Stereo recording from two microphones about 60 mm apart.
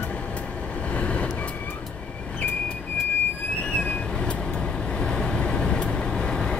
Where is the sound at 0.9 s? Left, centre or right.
Left.